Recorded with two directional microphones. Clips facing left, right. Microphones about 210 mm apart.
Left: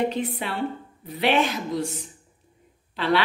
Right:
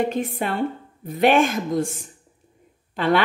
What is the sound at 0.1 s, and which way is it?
A woman's voice, 45° right (ahead or behind).